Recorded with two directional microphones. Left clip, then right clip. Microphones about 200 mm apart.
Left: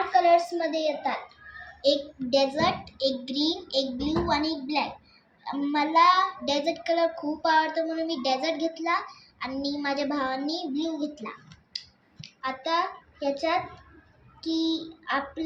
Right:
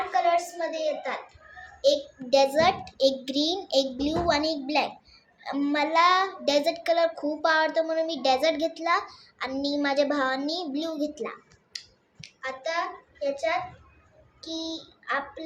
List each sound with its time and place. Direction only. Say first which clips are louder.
0.1 s child singing: left 4 dB; 15° right (ahead or behind)
1.8 s a child's voice: right 1 dB; 45° right (ahead or behind)
5.4 s child singing: right 1 dB; 55° right (ahead or behind)
12.2 s a child's voice: left 1 dB; 30° right (ahead or behind)
14.4 s child singing: left 6 dB; 15° right (ahead or behind)